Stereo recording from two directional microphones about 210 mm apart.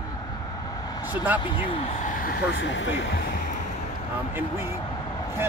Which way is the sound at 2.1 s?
45° left (ahead or behind).